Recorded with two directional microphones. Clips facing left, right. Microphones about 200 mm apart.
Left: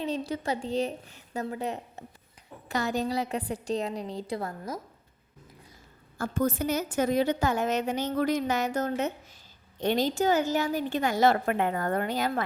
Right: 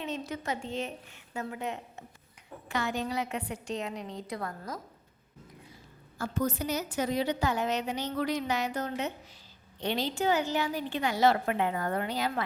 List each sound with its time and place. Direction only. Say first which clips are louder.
0.0 s a woman's voice: left 5 dB; 35° left (ahead or behind)
6.1 s a woman's voice: left 3 dB; 50° left (ahead or behind)